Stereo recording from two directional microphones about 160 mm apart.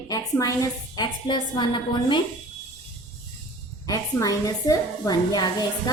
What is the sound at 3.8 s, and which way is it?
A woman's voice, 20° left (ahead or behind).